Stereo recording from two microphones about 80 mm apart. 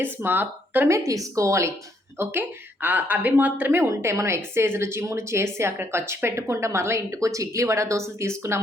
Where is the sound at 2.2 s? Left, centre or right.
Right.